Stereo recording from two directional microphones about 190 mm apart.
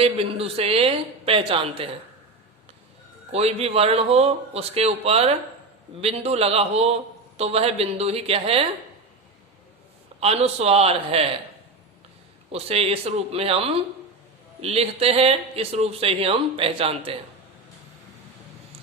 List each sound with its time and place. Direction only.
0.0 s speech: 30° right (ahead or behind)
3.3 s speech: 30° right (ahead or behind)
10.2 s speech: 35° right (ahead or behind)
12.5 s speech: 30° right (ahead or behind)